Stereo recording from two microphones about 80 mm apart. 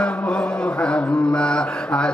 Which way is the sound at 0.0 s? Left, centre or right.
Centre.